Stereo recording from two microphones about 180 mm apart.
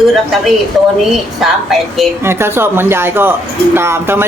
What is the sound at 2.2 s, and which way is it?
A woman's voice, 15° right (ahead or behind).